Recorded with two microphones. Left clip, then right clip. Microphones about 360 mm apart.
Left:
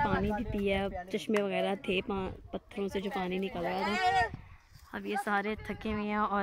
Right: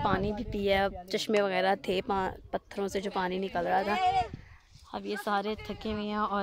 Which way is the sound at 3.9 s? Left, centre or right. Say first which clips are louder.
Right 1 dB; left.